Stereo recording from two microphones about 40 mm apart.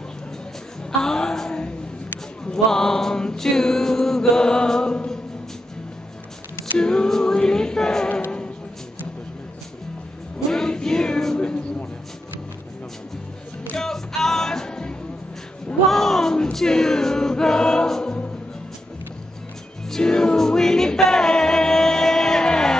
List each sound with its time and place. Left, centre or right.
1.0 s a sound: centre
2.5 s mantra: centre
6.8 s a capella: centre
10.5 s music: centre
11.3 s a sound: left
13.7 s music: centre
15.9 s a sound: centre
16.5 s choir: centre
20.0 s music: centre